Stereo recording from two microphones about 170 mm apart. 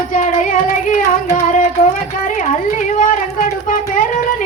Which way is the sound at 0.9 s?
50° left (ahead or behind).